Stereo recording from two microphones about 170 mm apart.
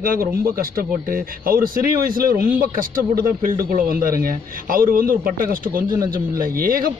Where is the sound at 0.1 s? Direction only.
60° right (ahead or behind).